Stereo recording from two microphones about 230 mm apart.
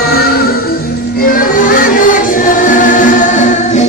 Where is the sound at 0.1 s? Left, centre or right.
Left.